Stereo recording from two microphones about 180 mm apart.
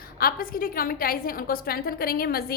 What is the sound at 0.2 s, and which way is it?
A woman's voice, 55° left (ahead or behind).